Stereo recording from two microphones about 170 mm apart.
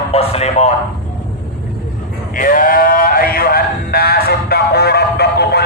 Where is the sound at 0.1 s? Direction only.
35° left (ahead or behind).